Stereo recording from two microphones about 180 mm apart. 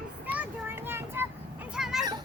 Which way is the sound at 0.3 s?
10° right (ahead or behind).